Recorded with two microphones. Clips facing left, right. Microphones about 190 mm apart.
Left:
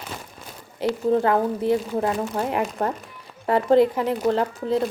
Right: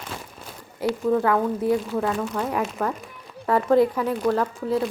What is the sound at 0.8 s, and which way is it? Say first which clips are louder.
Speech: left 1 dB; 30° left (ahead or behind).